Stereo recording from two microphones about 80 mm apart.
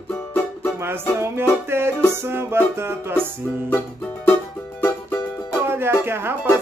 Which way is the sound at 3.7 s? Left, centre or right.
Left.